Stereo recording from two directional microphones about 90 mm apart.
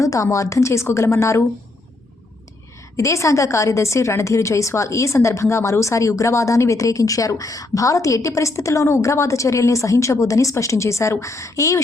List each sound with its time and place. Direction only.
0.0 s a woman's voice: 35° left (ahead or behind)
2.9 s a woman's voice: 35° left (ahead or behind)